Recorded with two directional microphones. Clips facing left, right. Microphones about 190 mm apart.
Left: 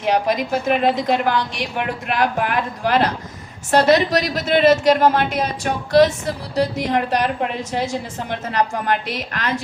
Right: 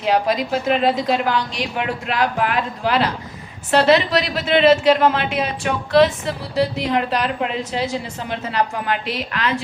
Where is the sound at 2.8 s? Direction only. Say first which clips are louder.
Left 2 dB; 50° left (ahead or behind).